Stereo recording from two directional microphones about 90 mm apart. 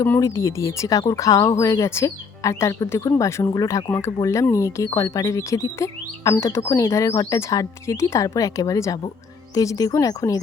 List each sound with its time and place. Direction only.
0.2 s speech: 35° left (ahead or behind)